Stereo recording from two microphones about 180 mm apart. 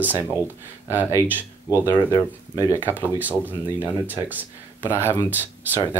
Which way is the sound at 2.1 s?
15° left (ahead or behind).